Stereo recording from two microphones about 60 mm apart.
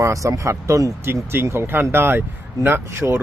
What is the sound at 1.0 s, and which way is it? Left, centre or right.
Speech, right.